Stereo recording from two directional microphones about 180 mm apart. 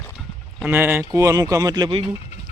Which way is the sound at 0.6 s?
10° right (ahead or behind).